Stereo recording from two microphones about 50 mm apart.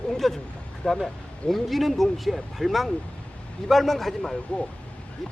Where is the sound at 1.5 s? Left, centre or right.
Centre.